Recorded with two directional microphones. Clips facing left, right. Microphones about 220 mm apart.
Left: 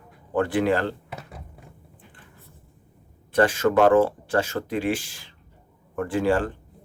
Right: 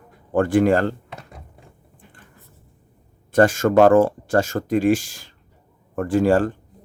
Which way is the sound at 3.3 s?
45° right (ahead or behind).